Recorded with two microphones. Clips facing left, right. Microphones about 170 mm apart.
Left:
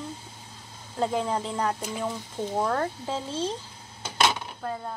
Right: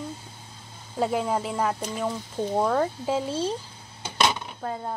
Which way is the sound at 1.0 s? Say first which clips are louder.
Right 2 dB; 5° right (ahead or behind).